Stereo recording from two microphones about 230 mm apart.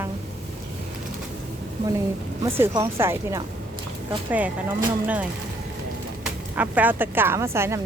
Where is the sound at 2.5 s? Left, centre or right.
Centre.